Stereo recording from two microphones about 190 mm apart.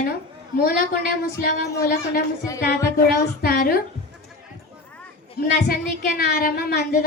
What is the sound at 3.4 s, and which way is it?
Speech, 50° left (ahead or behind).